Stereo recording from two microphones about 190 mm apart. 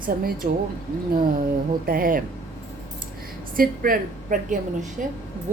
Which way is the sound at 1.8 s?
50° right (ahead or behind).